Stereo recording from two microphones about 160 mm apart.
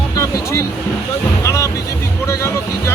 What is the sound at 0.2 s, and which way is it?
Music, 20° left (ahead or behind).